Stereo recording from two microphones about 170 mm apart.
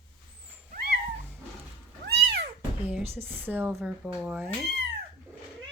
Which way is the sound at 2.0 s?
80° right.